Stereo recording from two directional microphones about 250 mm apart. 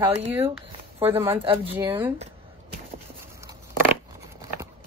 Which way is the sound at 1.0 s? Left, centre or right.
Centre.